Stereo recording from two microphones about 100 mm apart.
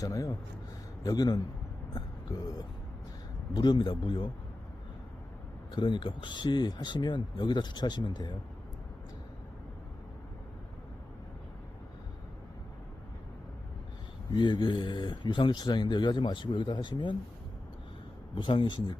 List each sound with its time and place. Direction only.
0.0 s a man's voice: 35° left (ahead or behind)
1.9 s a sound: 40° left (ahead or behind)
3.5 s speech: 45° left (ahead or behind)
5.7 s speech: 50° left (ahead or behind)
14.3 s speech: 50° left (ahead or behind)
18.3 s speech: 55° left (ahead or behind)